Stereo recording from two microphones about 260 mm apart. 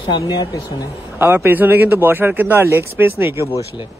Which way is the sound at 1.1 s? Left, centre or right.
Centre.